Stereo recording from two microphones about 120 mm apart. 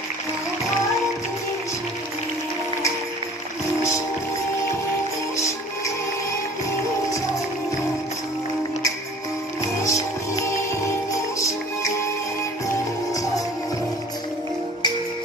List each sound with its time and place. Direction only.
9.6 s music: 25° left (ahead or behind)